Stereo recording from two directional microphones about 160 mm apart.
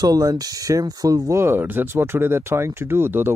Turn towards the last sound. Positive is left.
turn(degrees=-15)  # may be behind; listen again after turning